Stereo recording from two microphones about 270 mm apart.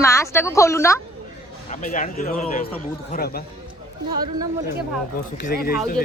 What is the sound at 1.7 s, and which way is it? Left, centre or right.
A man's voice, left.